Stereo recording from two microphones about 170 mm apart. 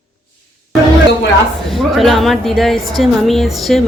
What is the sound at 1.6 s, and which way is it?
A woman's voice, centre (ahead or behind).